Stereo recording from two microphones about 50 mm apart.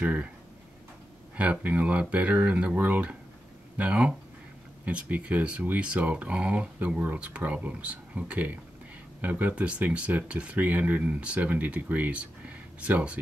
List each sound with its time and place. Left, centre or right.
0.0 s speech: right
1.3 s speech: right
11.0 s speech: right